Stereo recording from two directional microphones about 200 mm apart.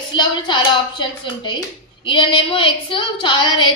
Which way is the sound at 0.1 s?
20° left (ahead or behind).